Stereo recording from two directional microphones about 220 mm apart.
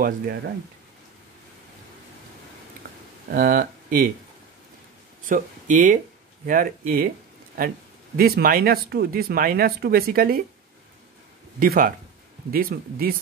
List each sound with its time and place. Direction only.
2.8 s a sound: 40° right (ahead or behind)
3.3 s speech: 40° right (ahead or behind)
5.2 s speech: 35° right (ahead or behind)
11.6 s speech: 40° right (ahead or behind)